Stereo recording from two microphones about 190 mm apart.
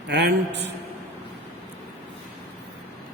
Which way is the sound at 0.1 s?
65° right (ahead or behind).